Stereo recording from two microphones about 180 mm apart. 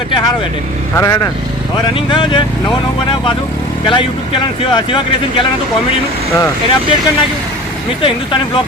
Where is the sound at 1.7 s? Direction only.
30° left (ahead or behind).